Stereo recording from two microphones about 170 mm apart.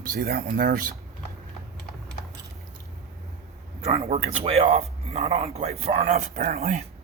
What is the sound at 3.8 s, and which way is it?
Speech, 35° right (ahead or behind).